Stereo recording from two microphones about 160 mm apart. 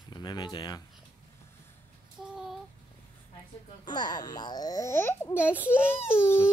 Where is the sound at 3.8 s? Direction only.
25° left (ahead or behind).